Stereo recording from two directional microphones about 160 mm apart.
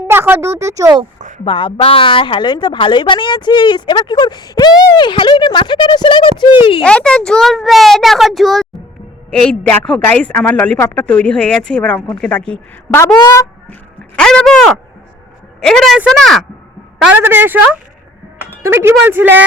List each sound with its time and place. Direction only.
0.1 s speech: 15° right (ahead or behind)
1.5 s speech: 30° left (ahead or behind)
6.8 s a woman's voice: 5° left (ahead or behind)
14.2 s a sound: 5° left (ahead or behind)
15.6 s speech: centre (ahead or behind)
17.0 s speech: 10° right (ahead or behind)
18.6 s speech: 15° right (ahead or behind)